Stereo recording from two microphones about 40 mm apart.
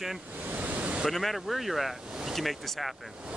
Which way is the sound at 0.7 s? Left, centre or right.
Right.